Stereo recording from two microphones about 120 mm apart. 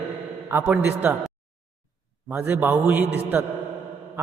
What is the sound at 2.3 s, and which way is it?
A man's voice, 10° right (ahead or behind).